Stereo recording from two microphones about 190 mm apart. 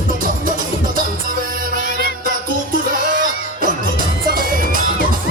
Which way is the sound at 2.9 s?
45° right (ahead or behind).